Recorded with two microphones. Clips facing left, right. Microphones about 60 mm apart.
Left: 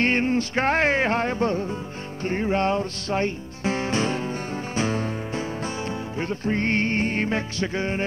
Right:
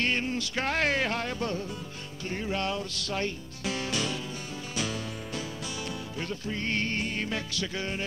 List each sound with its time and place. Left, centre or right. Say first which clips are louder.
0.0 s music: left 8 dB; left